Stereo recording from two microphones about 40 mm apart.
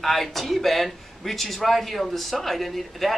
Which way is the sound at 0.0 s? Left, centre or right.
Centre.